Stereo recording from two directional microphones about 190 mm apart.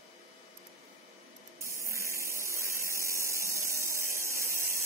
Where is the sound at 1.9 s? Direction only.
15° right (ahead or behind).